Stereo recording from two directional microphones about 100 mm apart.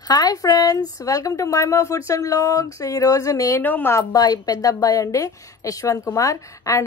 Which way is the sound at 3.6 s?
20° left (ahead or behind).